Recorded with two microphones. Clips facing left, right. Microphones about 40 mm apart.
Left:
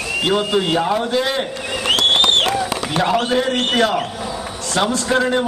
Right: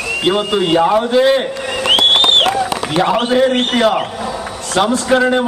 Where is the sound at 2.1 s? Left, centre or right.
Right.